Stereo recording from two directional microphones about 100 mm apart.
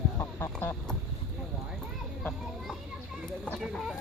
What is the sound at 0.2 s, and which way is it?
Chicken, 30° left (ahead or behind).